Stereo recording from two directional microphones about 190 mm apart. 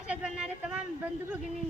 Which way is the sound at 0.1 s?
5° right (ahead or behind).